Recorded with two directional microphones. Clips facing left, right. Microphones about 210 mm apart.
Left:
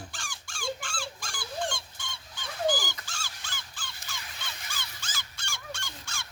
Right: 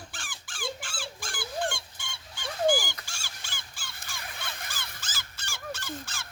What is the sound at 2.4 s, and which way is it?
Dog, 10° right (ahead or behind).